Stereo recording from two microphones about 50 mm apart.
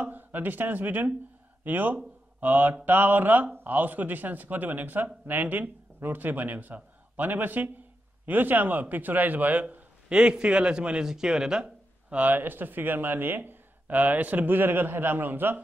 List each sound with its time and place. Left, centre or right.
0.0 s a man's voice: right
10.0 s a man's voice: right
11.6 s speech: right